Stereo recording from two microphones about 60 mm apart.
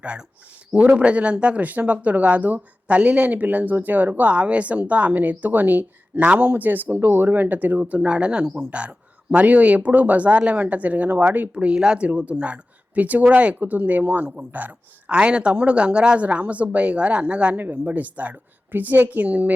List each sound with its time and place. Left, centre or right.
0.7 s speech: right